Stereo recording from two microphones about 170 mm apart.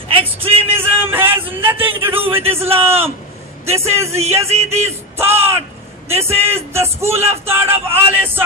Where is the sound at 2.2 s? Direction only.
35° right (ahead or behind).